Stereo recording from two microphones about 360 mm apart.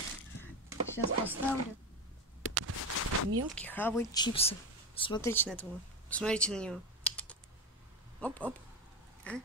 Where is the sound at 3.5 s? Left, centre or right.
Centre.